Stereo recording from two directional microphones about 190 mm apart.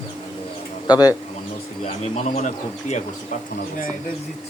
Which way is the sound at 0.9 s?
20° left (ahead or behind).